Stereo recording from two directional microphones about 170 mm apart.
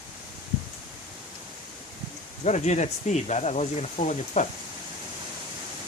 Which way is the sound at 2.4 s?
45° left (ahead or behind).